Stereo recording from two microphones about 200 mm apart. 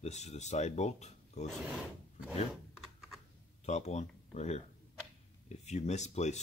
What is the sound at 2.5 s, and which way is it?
Typing, centre (ahead or behind).